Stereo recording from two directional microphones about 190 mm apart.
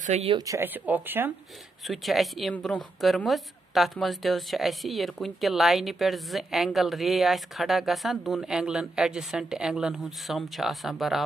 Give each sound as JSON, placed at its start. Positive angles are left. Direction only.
{"t": 0.0, "sound": "speech", "side_deg": -35}
{"t": 0.5, "sound": "speech", "side_deg": -10}
{"t": 1.9, "sound": "a woman's voice", "side_deg": 0}